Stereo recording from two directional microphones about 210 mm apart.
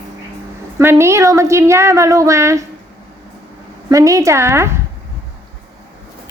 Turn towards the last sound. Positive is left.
turn(degrees=-10)  # may be behind; listen again after turning